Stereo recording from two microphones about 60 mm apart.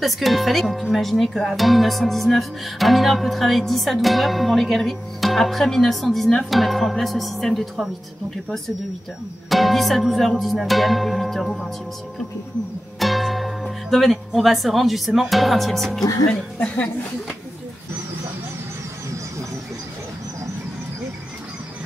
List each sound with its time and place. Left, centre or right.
0.0 s music: centre
9.5 s music: centre
13.0 s speech: centre
16.3 s speech: left